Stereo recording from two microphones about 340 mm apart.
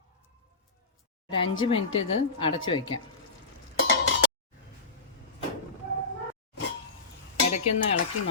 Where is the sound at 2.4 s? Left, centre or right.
Centre.